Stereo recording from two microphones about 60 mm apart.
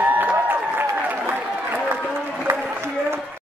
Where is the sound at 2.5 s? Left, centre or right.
Right.